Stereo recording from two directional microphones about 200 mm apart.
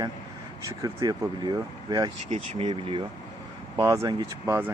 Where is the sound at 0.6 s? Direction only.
15° right (ahead or behind).